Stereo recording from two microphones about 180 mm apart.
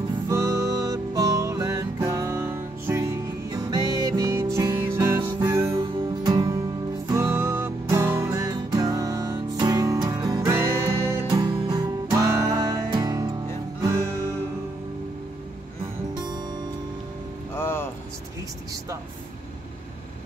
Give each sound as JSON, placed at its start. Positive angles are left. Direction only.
{"t": 0.3, "sound": "music", "side_deg": -15}
{"t": 5.8, "sound": "music", "side_deg": -25}
{"t": 17.6, "sound": "music", "side_deg": 15}